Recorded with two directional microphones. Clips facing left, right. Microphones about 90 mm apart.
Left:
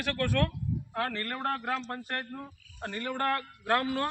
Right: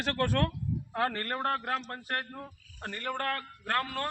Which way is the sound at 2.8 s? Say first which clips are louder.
Left 2 dB; 10° left (ahead or behind).